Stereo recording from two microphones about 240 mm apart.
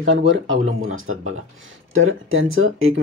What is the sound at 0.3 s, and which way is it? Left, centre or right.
Speech, right.